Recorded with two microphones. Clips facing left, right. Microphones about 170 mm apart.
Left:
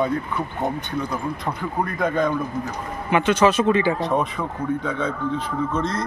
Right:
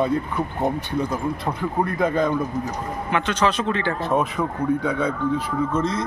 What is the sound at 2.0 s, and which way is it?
A man's voice, centre (ahead or behind).